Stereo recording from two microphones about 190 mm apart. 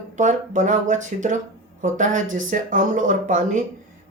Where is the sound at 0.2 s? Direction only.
40° right (ahead or behind).